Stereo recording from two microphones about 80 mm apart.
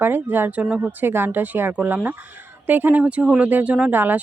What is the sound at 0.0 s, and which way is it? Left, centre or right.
Speech, right.